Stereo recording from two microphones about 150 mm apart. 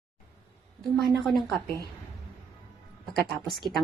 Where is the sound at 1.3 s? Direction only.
Centre (ahead or behind).